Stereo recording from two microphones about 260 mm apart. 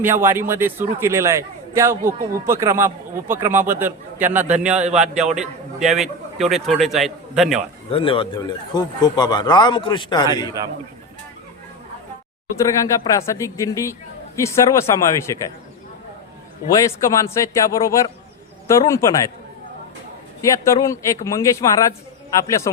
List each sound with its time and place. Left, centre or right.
0.0 s a man's voice: centre
7.9 s speech: left
12.5 s speech: centre
16.7 s speech: centre
20.5 s speech: centre